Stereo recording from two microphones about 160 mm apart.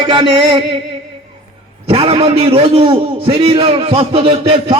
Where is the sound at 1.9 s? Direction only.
35° right (ahead or behind).